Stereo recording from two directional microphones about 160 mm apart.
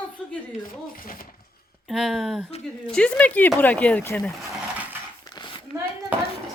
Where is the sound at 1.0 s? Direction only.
60° left (ahead or behind).